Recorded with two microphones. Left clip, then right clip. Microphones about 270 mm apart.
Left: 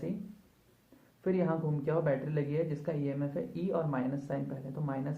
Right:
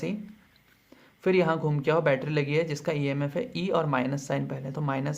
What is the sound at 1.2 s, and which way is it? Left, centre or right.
Speech, right.